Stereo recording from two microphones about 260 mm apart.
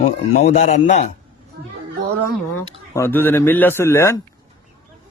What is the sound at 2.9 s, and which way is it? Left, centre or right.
A man's voice, centre.